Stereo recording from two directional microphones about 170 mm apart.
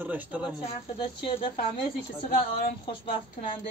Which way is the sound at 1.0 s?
30° left (ahead or behind).